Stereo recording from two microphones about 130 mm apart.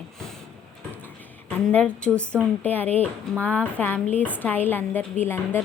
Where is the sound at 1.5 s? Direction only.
10° left (ahead or behind).